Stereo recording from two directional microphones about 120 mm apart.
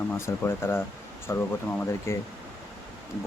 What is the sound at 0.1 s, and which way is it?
Speech, 20° left (ahead or behind).